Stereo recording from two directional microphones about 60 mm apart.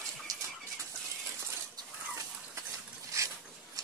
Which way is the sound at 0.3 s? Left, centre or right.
Right.